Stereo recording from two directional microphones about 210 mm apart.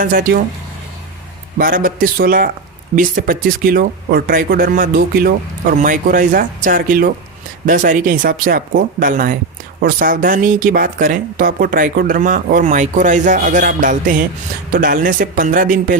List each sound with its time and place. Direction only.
0.0 s speech: 40° right (ahead or behind)
1.5 s speech: 40° right (ahead or behind)